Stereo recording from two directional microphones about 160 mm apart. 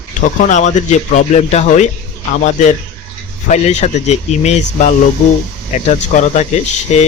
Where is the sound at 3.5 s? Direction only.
45° left (ahead or behind).